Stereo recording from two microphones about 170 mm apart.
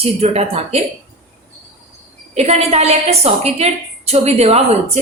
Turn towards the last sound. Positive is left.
turn(degrees=-35)  # may be behind; listen again after turning